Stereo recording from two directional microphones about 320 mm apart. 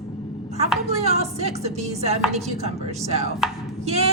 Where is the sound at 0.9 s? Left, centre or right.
Centre.